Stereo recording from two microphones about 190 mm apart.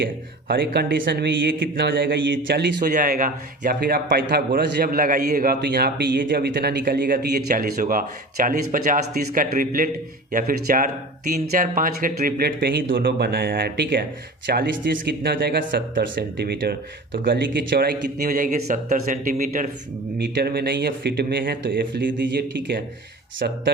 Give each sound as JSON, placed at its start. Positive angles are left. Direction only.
{"t": 0.0, "sound": "speech", "side_deg": -60}
{"t": 2.8, "sound": "a man's voice", "side_deg": -45}
{"t": 20.1, "sound": "speech", "side_deg": -60}